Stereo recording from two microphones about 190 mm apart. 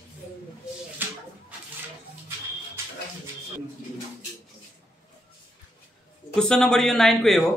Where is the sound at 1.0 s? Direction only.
10° right (ahead or behind).